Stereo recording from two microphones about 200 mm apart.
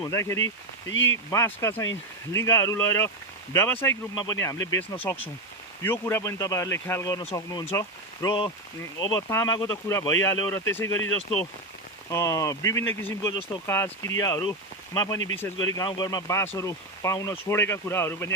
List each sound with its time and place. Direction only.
0.0 s speech: 15° left (ahead or behind)
0.9 s speech: 70° left (ahead or behind)
1.3 s speech: 15° left (ahead or behind)
4.5 s speech: 70° left (ahead or behind)
5.8 s speech: 10° left (ahead or behind)
12.1 s speech: 15° left (ahead or behind)